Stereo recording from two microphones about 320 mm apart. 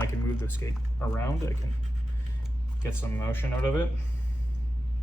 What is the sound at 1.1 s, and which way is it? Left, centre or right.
Speech, centre.